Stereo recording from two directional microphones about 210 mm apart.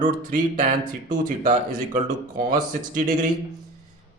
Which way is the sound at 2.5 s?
40° right (ahead or behind).